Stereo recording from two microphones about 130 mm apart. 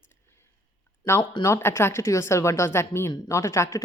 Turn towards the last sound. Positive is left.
turn(degrees=20)  # may be behind; listen again after turning